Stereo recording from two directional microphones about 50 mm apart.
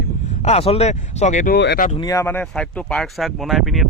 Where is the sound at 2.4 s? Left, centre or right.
Centre.